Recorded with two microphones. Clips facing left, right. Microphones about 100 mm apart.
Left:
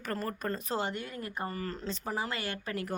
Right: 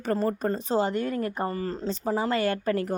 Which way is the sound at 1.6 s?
25° right (ahead or behind).